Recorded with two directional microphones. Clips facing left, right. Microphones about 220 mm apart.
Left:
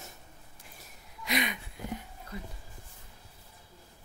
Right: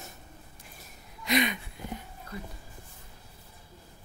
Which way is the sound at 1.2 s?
10° left (ahead or behind).